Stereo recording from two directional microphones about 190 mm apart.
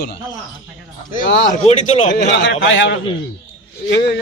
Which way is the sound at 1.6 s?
40° left (ahead or behind).